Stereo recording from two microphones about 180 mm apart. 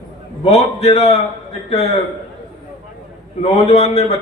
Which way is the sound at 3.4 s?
35° left (ahead or behind).